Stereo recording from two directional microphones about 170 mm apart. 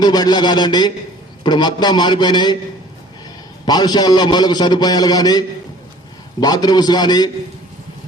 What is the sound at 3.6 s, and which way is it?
A man's voice, 25° left (ahead or behind).